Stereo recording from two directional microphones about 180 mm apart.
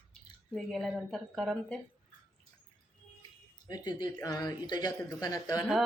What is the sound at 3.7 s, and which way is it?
Speech, 20° left (ahead or behind).